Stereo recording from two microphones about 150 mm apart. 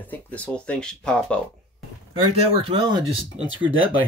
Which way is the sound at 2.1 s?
35° right (ahead or behind).